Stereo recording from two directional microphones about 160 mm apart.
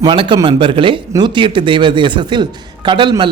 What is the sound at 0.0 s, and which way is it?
Speech, 30° right (ahead or behind).